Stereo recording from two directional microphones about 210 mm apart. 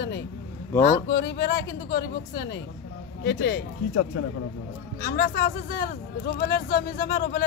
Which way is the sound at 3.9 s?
90° left.